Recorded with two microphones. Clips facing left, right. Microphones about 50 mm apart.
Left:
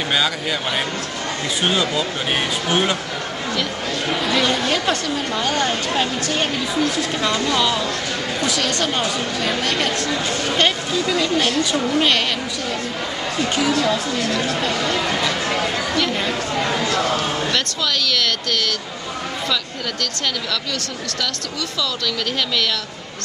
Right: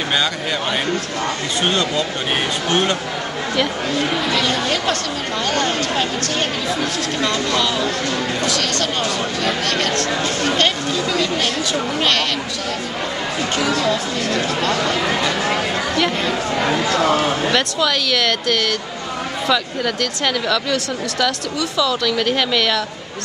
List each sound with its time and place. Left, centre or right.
1.6 s speech: centre
4.3 s speech: centre
13.6 s speech: centre
14.8 s a sound: centre
16.5 s speech: right